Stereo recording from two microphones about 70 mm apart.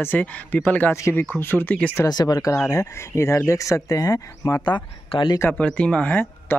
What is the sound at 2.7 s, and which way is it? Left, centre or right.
Speech, left.